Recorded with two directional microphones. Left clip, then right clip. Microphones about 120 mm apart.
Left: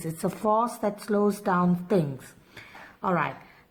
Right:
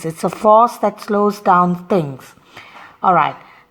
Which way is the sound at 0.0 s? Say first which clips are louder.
Right 13 dB; 40° right (ahead or behind).